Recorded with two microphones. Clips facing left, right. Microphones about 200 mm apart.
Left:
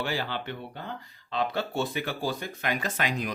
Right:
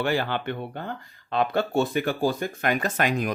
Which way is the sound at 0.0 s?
55° right (ahead or behind).